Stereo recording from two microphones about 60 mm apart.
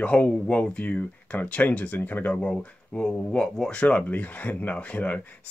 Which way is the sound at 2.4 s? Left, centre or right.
Centre.